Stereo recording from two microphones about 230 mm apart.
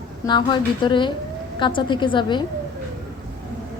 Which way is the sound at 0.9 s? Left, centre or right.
Centre.